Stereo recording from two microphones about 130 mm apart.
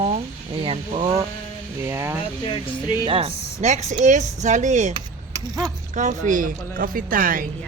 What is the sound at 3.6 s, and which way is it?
Speech, 60° right (ahead or behind).